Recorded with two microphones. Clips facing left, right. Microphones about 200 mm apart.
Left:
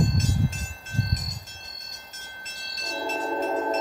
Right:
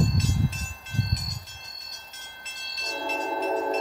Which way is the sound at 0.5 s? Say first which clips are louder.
Left 1 dB; 50° left (ahead or behind).